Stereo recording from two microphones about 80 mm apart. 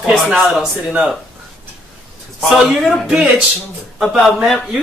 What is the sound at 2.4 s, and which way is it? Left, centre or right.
Speech, centre.